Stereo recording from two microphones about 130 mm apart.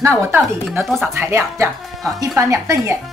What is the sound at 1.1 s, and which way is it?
Speech, 20° right (ahead or behind).